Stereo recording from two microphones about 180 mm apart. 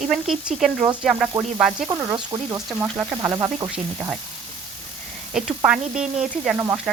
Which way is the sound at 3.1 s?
15° right (ahead or behind).